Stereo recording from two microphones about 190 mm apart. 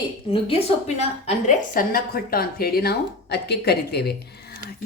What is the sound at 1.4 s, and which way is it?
Speech, 45° left (ahead or behind).